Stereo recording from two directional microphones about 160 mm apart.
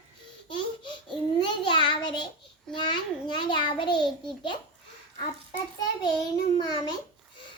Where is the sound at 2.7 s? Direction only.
30° left (ahead or behind).